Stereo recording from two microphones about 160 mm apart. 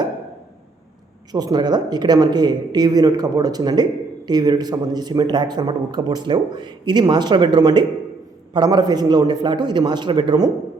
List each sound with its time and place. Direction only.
1.3 s a man's voice: 25° right (ahead or behind)